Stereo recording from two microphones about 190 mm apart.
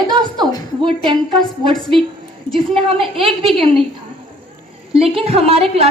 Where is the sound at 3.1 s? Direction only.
30° right (ahead or behind).